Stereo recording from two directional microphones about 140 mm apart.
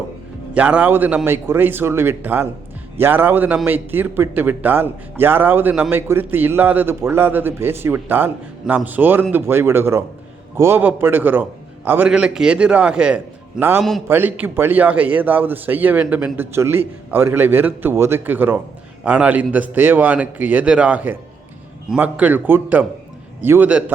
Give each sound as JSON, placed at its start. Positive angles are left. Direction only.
{"t": 0.5, "sound": "a man's voice", "side_deg": -10}